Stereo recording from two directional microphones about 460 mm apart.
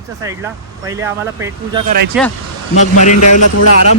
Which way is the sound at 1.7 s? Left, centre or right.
Centre.